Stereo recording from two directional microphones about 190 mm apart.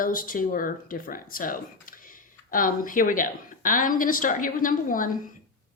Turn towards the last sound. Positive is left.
turn(degrees=45)  # may be behind; listen again after turning